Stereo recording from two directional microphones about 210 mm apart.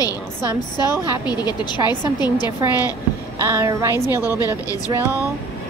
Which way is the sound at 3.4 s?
10° right (ahead or behind).